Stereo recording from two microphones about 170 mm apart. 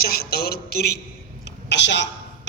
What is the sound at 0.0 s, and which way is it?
Speech, 65° left (ahead or behind).